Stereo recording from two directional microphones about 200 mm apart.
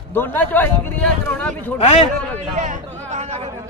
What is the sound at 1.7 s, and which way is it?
Speech, 30° left (ahead or behind).